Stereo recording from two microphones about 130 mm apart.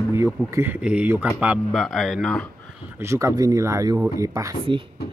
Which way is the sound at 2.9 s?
20° right (ahead or behind).